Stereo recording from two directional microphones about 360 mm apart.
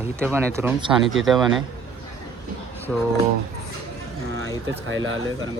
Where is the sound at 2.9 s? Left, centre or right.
Centre.